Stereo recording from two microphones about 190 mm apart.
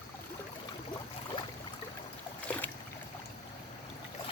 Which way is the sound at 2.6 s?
10° left (ahead or behind).